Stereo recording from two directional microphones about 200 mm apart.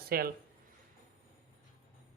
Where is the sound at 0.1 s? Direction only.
50° right (ahead or behind).